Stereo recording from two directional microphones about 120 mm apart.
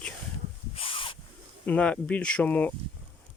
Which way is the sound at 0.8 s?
50° left (ahead or behind).